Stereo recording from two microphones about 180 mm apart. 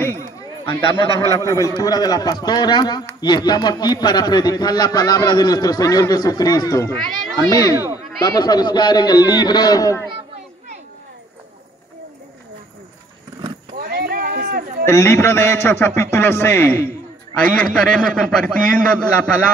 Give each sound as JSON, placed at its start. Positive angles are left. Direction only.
{"t": 1.2, "sound": "a man's voice", "side_deg": 15}
{"t": 13.7, "sound": "a sound", "side_deg": -60}
{"t": 14.9, "sound": "a man's voice", "side_deg": 15}